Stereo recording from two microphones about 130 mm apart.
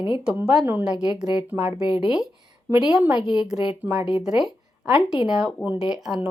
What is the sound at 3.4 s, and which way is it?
A woman's voice, 5° right (ahead or behind).